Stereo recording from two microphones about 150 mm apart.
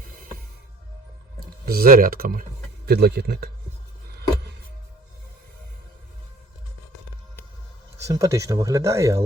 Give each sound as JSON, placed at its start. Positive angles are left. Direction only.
{"t": 1.6, "sound": "speech", "side_deg": -80}
{"t": 2.8, "sound": "speech", "side_deg": -90}
{"t": 8.0, "sound": "speech", "side_deg": -20}